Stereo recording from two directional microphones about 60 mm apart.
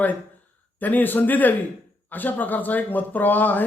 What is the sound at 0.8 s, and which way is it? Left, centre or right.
A man's voice, left.